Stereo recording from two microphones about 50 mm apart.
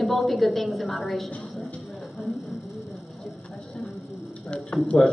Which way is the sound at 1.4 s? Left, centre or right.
Centre.